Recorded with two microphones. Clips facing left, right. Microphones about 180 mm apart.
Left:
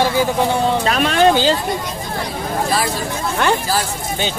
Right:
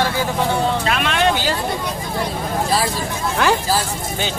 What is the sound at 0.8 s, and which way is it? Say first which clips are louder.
Speech: left 4 dB; 40° left (ahead or behind).